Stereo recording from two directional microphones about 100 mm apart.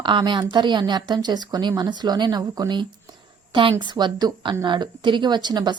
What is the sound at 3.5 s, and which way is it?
A woman's voice, 55° right (ahead or behind).